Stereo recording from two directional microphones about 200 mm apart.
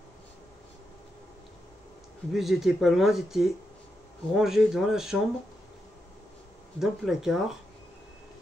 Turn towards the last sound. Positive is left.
turn(degrees=0)  # may be behind; listen again after turning